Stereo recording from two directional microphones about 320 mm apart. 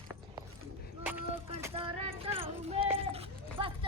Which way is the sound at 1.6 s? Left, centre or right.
Centre.